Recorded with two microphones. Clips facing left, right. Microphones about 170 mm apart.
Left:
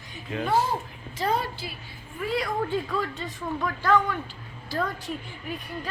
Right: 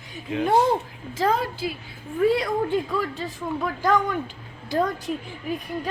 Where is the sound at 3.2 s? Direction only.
10° right (ahead or behind).